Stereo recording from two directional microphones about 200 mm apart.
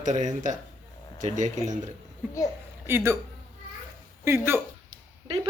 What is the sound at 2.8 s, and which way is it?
Speech, 10° right (ahead or behind).